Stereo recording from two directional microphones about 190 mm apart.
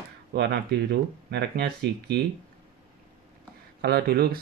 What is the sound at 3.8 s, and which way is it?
Speech, 55° right (ahead or behind).